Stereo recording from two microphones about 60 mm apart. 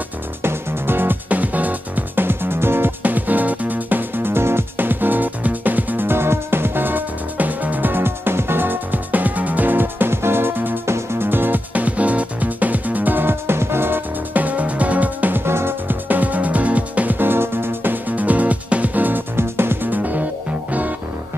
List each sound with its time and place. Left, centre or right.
0.4 s music: right
15.4 s music: right
18.1 s music: right